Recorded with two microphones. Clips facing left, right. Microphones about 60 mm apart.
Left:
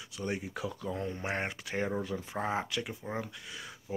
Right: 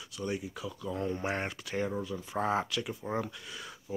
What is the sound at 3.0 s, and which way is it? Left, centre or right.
Speech, centre.